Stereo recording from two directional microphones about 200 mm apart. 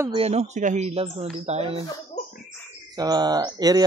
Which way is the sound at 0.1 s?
30° right (ahead or behind).